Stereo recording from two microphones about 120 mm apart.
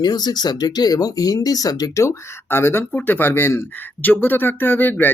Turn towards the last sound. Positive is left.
turn(degrees=15)  # may be behind; listen again after turning